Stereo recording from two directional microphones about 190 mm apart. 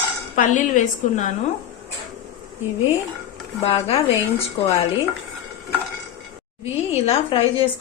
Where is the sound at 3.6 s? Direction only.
30° left (ahead or behind).